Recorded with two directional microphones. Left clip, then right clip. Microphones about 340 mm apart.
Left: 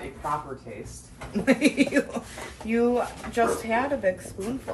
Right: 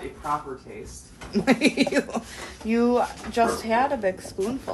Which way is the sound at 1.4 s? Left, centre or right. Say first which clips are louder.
Even; right.